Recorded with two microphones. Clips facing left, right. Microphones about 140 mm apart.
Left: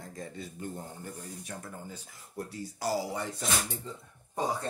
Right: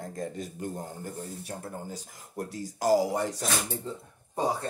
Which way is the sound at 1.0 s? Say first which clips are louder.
Right 4 dB; 40° right (ahead or behind).